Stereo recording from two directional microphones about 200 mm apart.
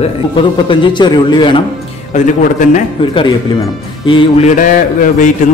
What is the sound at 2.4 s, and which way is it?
Speech, 40° left (ahead or behind).